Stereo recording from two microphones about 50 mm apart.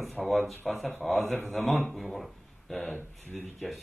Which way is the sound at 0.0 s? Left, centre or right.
Centre.